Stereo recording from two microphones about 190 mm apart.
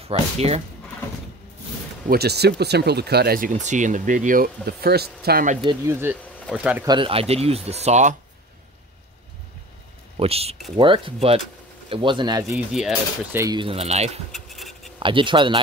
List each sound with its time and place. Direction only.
0.1 s speech: 30° right (ahead or behind)
2.0 s speech: 55° right (ahead or behind)
5.7 s speech: 15° right (ahead or behind)
6.8 s speech: 25° right (ahead or behind)
10.1 s speech: 30° right (ahead or behind)
12.5 s speech: 5° right (ahead or behind)
13.4 s speech: 25° right (ahead or behind)
14.3 s scratch: centre (ahead or behind)
15.0 s speech: 25° right (ahead or behind)